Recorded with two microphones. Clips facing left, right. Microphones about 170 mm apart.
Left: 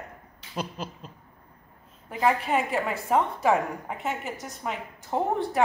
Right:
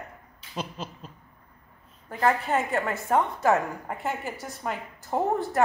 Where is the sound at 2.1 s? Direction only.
5° left (ahead or behind).